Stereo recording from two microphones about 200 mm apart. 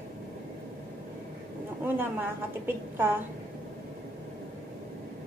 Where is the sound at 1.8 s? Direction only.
10° right (ahead or behind).